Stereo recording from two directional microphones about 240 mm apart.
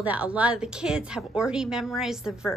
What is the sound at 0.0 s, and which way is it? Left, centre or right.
A woman's voice, centre.